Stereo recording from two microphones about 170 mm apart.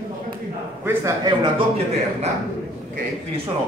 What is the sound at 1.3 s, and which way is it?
A man's voice, 35° right (ahead or behind).